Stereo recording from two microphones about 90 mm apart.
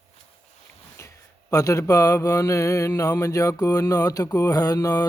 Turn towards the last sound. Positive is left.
turn(degrees=45)  # may be behind; listen again after turning